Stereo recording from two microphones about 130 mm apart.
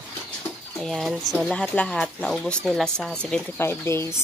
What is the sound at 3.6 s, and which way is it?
Speech, 20° left (ahead or behind).